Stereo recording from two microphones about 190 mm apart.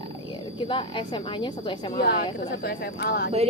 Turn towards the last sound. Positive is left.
turn(degrees=55)  # may be behind; listen again after turning